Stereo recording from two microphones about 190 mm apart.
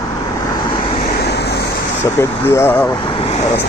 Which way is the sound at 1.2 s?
60° left (ahead or behind).